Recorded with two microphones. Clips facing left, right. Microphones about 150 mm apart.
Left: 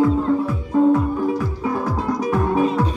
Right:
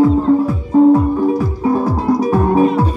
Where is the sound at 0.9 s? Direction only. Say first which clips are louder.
Right 6 dB; 35° right (ahead or behind).